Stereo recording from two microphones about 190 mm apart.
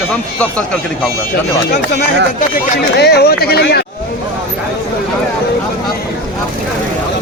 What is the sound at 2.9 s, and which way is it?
Speech, 60° left (ahead or behind).